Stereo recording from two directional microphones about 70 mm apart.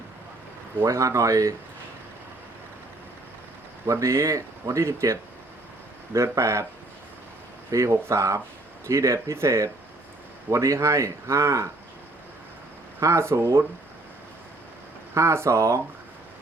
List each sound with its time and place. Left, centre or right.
0.9 s a man's voice: right
4.0 s a man's voice: right
6.1 s a man's voice: right
7.7 s a man's voice: right
13.0 s a man's voice: right
15.1 s a man's voice: right